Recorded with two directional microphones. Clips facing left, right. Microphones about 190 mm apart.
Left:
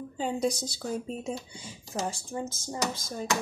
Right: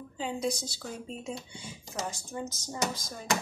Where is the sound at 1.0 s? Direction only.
40° left (ahead or behind).